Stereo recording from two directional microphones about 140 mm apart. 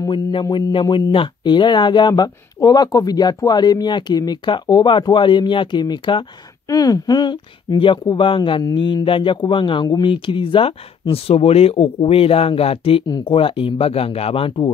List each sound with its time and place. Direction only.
0.0 s speech: 35° left (ahead or behind)